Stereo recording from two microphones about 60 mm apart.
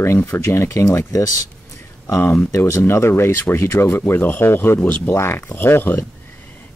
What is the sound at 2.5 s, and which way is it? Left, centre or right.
Speech, left.